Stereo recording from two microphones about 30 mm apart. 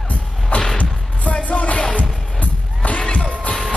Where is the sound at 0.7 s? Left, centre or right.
Left.